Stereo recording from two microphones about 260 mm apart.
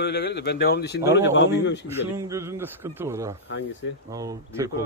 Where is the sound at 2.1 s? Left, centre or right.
Centre.